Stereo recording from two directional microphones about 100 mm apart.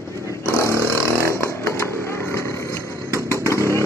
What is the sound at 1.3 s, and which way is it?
Chainsaw, 25° left (ahead or behind).